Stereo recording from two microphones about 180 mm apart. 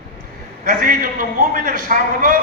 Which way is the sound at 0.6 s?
50° right (ahead or behind).